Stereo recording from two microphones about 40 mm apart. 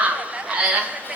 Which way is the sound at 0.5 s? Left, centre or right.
Right.